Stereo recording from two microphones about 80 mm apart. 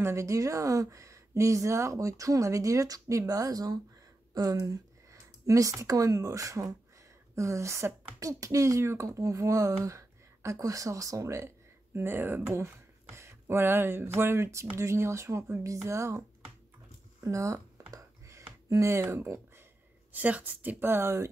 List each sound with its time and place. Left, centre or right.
0.0 s speech: right
13.1 s speech: right
17.2 s speech: right
17.9 s a sound: right
20.1 s a woman's voice: right